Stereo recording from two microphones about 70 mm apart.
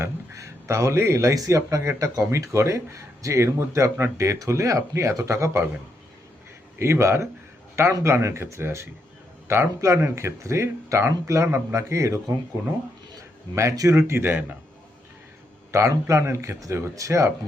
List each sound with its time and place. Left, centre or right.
0.0 s speech: right
6.7 s speech: right
13.6 s speech: right
15.7 s speech: right